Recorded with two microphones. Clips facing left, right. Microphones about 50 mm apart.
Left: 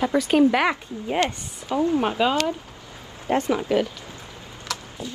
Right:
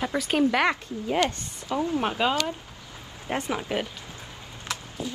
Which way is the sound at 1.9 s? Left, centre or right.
Centre.